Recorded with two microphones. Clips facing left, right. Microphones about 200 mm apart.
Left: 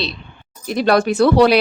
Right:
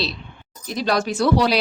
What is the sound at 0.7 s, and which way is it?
Speech, 60° left (ahead or behind).